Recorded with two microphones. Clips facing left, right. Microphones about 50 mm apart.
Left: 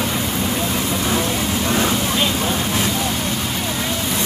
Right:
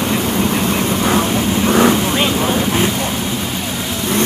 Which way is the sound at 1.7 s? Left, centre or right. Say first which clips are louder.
Right 8 dB; right.